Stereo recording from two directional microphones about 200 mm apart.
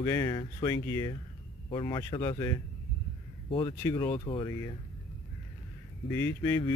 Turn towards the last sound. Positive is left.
turn(degrees=15)  # may be behind; listen again after turning